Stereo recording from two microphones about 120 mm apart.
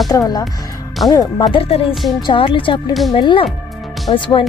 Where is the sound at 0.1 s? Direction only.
35° left (ahead or behind).